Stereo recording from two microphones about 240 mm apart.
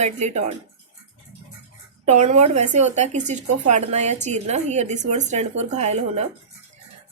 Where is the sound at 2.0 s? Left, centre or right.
Right.